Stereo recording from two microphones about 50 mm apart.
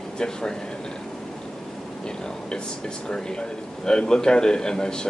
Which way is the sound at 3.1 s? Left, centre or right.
Centre.